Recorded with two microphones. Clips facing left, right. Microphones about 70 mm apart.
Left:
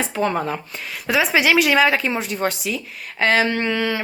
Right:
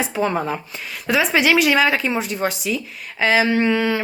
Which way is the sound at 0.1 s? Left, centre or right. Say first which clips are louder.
Even; centre.